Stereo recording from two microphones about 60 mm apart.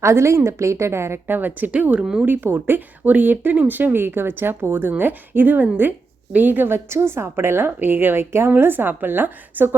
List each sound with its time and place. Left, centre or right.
0.0 s a woman's voice: right
1.4 s speech: right
2.0 s speech: centre
2.2 s speech: right